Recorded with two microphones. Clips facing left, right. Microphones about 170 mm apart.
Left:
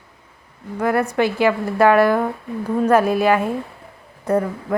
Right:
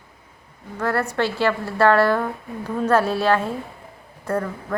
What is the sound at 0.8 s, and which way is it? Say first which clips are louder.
A woman's voice: left 4 dB; 15° left (ahead or behind).